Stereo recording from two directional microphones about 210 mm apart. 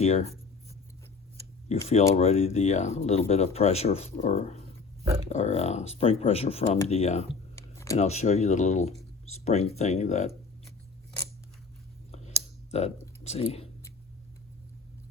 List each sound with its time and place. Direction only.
0.0 s speech: 30° left (ahead or behind)
1.7 s speech: 30° left (ahead or behind)
7.5 s a sound: 15° left (ahead or behind)
7.9 s speech: 30° left (ahead or behind)
12.7 s speech: 30° left (ahead or behind)